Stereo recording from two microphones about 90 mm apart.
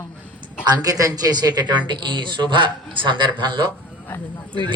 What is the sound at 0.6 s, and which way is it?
Speech, 45° right (ahead or behind).